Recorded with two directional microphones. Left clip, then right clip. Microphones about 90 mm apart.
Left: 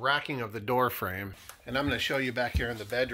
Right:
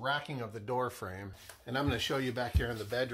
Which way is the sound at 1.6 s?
20° right (ahead or behind).